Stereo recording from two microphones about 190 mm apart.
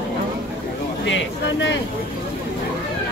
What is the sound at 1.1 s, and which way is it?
Speech, 75° left (ahead or behind).